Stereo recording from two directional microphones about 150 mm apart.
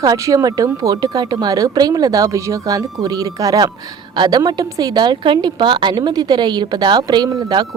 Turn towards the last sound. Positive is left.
turn(degrees=-30)  # may be behind; listen again after turning